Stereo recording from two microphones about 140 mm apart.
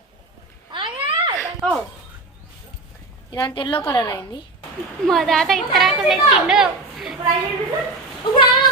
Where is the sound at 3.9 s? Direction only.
25° left (ahead or behind).